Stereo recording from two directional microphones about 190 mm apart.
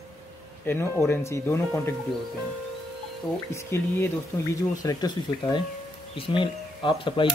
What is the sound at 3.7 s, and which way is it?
Speech, 15° left (ahead or behind).